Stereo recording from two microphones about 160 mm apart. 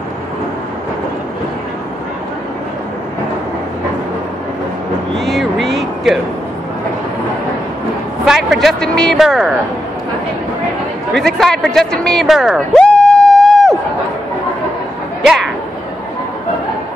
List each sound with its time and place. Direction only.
5.2 s a sound: centre (ahead or behind)
8.3 s a man's voice: centre (ahead or behind)
11.1 s speech: centre (ahead or behind)